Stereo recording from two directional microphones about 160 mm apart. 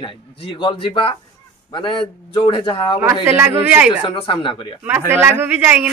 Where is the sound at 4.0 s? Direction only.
30° left (ahead or behind).